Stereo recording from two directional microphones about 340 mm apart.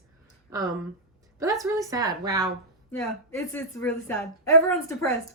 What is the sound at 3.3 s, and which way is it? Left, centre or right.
A woman's voice, centre.